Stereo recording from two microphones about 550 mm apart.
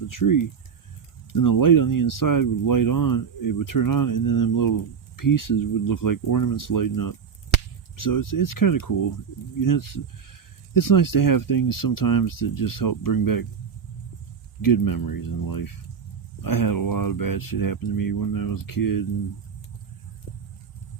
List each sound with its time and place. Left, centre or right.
0.1 s speech: left
14.6 s speech: left